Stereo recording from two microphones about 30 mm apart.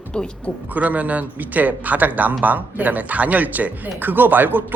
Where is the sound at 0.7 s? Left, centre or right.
Right.